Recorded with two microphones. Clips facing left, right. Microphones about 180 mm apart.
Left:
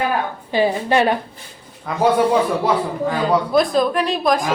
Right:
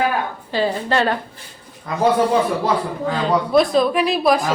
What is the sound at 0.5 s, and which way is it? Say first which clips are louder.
Speech: left 3 dB; 15° left (ahead or behind).